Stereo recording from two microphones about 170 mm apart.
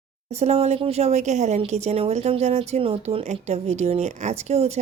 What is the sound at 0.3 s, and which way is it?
A woman's voice, 40° right (ahead or behind).